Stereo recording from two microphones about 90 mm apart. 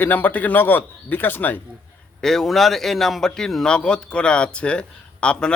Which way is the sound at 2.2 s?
5° left (ahead or behind).